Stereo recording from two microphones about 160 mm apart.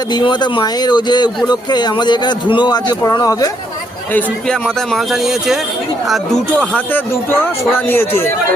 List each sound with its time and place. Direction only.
0.1 s a man's voice: 25° left (ahead or behind)
4.1 s a man's voice: 5° left (ahead or behind)
6.7 s speech: 10° left (ahead or behind)